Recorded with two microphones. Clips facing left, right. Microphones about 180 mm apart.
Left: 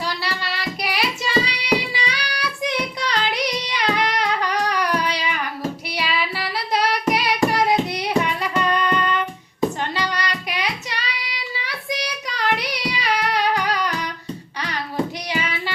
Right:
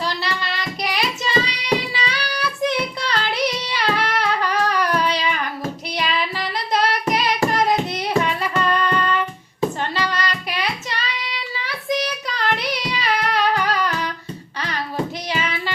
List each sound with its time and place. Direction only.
0.2 s child singing: 10° left (ahead or behind)
6.0 s singing: 10° left (ahead or behind)
9.9 s child singing: 15° left (ahead or behind)
15.3 s music: 15° left (ahead or behind)